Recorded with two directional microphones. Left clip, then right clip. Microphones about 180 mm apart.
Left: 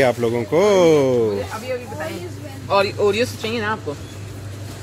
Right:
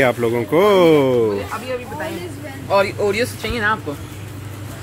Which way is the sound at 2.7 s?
45° left (ahead or behind).